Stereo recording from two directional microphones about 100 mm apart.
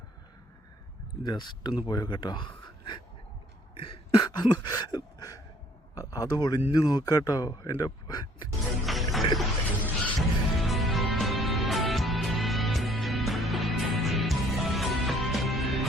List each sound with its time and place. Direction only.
1.2 s speech: 50° left (ahead or behind)
3.8 s a sound: 60° left (ahead or behind); by 5.4 s 40° left (ahead or behind)
6.0 s speech: 35° left (ahead or behind)
8.9 s music: centre (ahead or behind)